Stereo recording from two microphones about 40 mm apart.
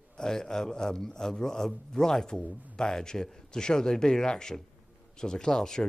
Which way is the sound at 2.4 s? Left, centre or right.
Right.